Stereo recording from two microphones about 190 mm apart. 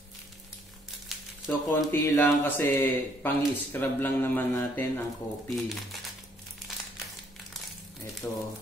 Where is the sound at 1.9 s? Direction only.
10° left (ahead or behind).